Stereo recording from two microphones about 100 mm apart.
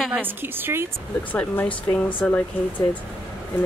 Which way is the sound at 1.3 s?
15° left (ahead or behind).